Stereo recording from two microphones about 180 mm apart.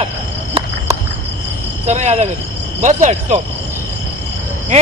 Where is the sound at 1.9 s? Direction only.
40° right (ahead or behind).